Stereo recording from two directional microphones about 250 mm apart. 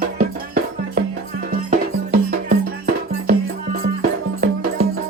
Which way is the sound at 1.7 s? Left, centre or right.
Right.